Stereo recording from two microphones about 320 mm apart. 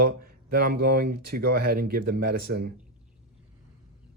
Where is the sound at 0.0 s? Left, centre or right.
Right.